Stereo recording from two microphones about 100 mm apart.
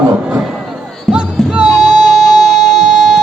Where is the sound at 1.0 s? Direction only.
10° right (ahead or behind).